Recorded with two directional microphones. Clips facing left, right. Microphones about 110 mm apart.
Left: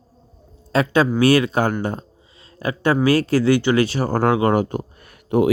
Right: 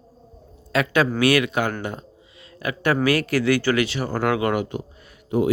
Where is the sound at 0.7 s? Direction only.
30° left (ahead or behind).